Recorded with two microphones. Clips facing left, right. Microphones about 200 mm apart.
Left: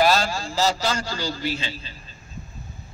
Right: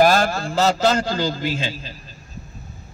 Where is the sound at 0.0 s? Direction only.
50° right (ahead or behind).